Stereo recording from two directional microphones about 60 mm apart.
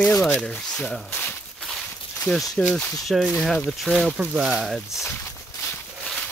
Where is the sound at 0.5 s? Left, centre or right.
Left.